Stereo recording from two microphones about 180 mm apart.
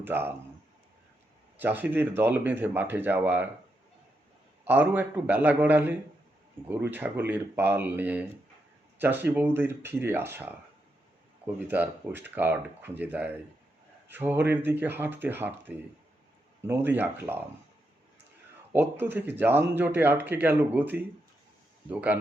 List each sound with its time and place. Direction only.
0.0 s speech: 10° right (ahead or behind)
1.5 s speech: 10° right (ahead or behind)
4.6 s speech: 10° right (ahead or behind)
18.7 s speech: 10° right (ahead or behind)